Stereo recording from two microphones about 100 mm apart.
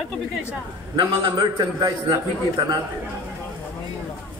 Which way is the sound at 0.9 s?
50° right (ahead or behind).